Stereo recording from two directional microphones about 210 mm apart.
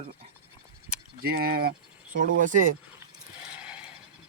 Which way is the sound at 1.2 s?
45° right (ahead or behind).